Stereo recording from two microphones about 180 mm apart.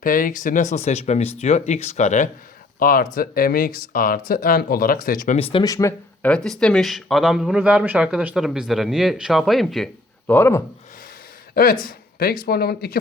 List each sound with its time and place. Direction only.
0.0 s speech: 50° left (ahead or behind)
2.7 s speech: 50° left (ahead or behind)
5.4 s speech: 30° left (ahead or behind)
5.6 s speech: 15° left (ahead or behind)
6.3 s speech: 5° left (ahead or behind)
11.5 s speech: 50° left (ahead or behind)